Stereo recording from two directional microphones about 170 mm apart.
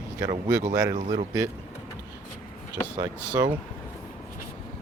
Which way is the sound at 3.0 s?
20° right (ahead or behind).